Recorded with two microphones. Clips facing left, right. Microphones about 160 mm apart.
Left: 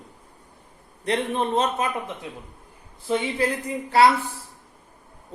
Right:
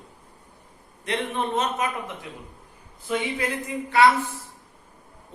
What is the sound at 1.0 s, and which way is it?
Speech, 35° left (ahead or behind).